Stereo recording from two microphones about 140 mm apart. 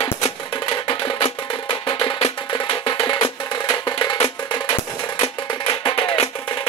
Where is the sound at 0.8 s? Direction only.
35° left (ahead or behind).